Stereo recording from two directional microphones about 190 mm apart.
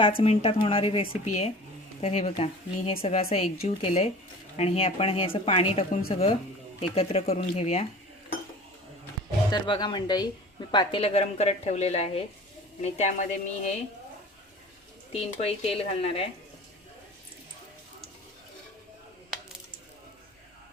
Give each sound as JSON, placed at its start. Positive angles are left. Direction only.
{"t": 0.2, "sound": "a woman's voice", "side_deg": 30}
{"t": 9.5, "sound": "a woman's voice", "side_deg": 25}
{"t": 15.1, "sound": "speech", "side_deg": 30}